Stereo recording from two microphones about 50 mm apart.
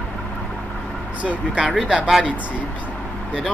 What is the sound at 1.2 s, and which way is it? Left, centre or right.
Speech, right.